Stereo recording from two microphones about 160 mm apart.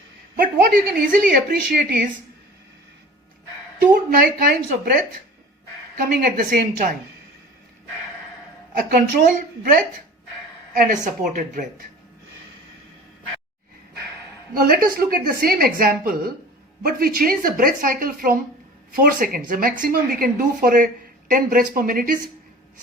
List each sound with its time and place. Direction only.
0.3 s speech: 60° right (ahead or behind)
3.8 s speech: 65° right (ahead or behind)
6.0 s speech: 65° right (ahead or behind)
8.9 s a woman's voice: 70° right (ahead or behind)
14.5 s speech: 70° right (ahead or behind)